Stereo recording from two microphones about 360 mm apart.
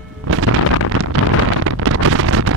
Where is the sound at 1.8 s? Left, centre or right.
Right.